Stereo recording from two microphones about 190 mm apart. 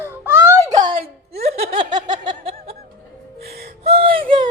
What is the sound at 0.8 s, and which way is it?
Speech, 30° right (ahead or behind).